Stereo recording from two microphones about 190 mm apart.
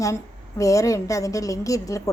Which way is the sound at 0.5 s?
15° left (ahead or behind).